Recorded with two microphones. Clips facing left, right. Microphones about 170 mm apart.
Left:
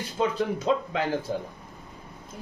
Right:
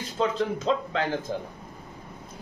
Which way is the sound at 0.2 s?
10° left (ahead or behind).